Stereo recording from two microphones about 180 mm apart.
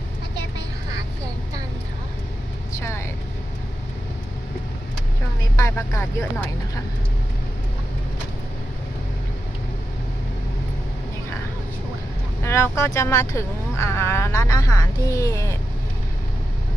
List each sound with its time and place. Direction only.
5.5 s speech: 15° left (ahead or behind)
12.4 s speech: 15° left (ahead or behind)